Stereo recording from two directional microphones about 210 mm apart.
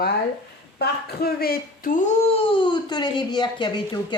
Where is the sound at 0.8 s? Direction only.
45° left (ahead or behind).